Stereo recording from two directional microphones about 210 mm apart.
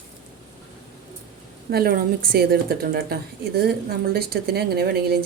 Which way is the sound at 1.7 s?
45° right (ahead or behind).